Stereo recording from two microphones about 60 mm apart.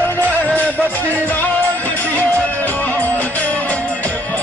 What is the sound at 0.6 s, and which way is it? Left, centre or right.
Music, left.